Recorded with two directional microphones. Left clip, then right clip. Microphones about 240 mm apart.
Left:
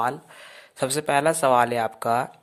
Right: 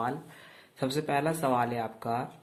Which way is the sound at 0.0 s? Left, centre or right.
Left.